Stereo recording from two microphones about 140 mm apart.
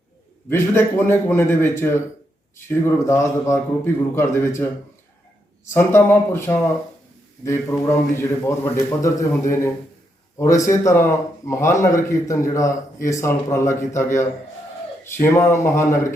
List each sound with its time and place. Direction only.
0.5 s a man's voice: 15° left (ahead or behind)
5.7 s a man's voice: 15° left (ahead or behind)